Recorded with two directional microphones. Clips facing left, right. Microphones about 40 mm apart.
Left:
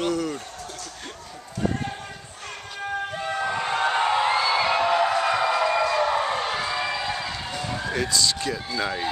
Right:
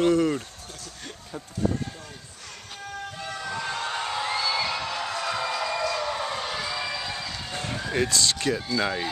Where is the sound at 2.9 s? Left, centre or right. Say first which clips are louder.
Left 7 dB; left.